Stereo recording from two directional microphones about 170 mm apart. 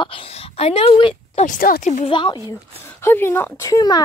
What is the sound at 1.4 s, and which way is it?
Speech, 55° left (ahead or behind).